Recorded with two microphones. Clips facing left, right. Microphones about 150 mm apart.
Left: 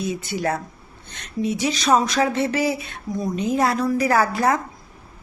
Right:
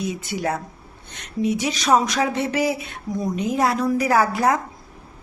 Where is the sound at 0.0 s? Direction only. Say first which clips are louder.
Left 1 dB; 15° right (ahead or behind).